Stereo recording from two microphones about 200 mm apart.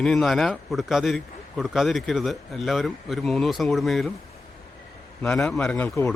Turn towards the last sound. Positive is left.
turn(degrees=10)  # may be behind; listen again after turning